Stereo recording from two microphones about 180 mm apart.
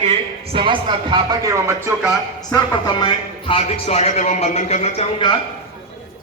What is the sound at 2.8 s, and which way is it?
Speech, 25° left (ahead or behind).